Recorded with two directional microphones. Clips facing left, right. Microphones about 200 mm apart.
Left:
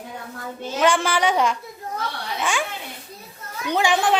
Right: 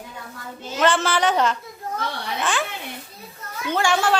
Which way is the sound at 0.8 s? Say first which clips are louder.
Even; 10° left (ahead or behind).